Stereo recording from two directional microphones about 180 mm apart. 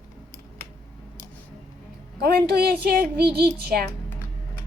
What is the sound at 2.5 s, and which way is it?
Speech, 60° right (ahead or behind).